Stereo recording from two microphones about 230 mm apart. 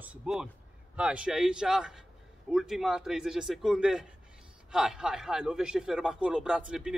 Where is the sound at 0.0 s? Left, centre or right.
Centre.